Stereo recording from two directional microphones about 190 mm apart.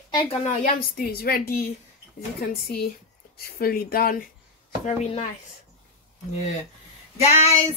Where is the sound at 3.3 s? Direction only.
50° left (ahead or behind).